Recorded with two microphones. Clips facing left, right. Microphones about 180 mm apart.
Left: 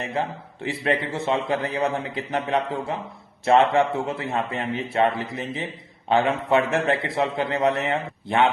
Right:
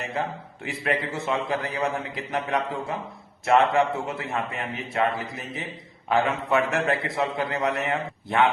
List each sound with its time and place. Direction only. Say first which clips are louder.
0.0 s a man's voice: left 2 dB; 30° left (ahead or behind)